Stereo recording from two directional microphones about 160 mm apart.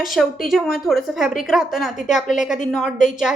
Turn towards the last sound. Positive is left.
turn(degrees=0)  # may be behind; listen again after turning